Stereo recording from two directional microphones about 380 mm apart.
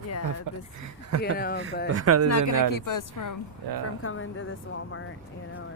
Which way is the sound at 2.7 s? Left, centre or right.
Left.